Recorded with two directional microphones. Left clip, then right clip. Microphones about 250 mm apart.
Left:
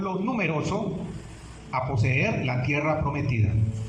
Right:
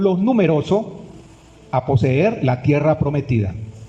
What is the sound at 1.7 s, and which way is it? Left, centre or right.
A man's voice, right.